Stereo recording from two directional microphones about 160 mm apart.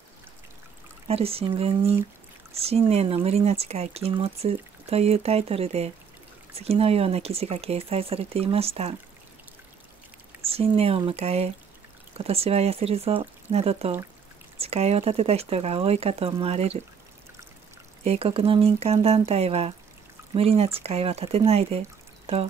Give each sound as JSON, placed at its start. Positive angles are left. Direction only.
{"t": 1.0, "sound": "speech", "side_deg": -40}
{"t": 10.4, "sound": "speech", "side_deg": -35}
{"t": 18.0, "sound": "speech", "side_deg": -40}